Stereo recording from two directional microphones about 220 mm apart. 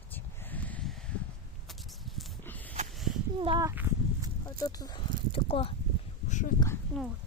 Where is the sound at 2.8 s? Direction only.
30° right (ahead or behind).